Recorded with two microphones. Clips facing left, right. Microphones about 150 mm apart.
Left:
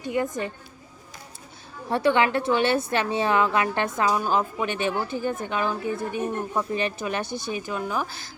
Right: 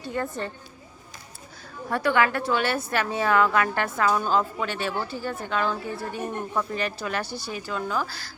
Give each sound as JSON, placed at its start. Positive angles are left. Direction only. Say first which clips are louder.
{"t": 0.0, "sound": "a woman's voice", "louder": "left 3 dB", "side_deg": 15}
{"t": 1.9, "sound": "a woman's voice", "louder": "left 2 dB", "side_deg": 25}